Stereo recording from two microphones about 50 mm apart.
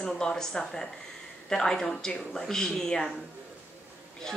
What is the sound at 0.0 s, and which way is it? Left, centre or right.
Speech, centre.